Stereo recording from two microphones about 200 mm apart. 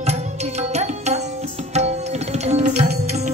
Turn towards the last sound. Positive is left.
turn(degrees=-35)  # may be behind; listen again after turning